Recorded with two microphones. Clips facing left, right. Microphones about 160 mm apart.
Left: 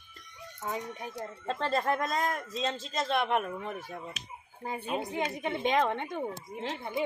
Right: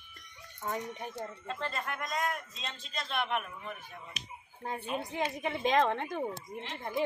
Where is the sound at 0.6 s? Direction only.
5° left (ahead or behind).